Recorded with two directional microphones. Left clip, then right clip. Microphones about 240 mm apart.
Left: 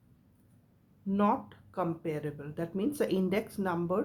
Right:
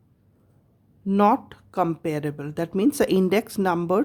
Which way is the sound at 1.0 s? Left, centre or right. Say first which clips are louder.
Right 10 dB; right.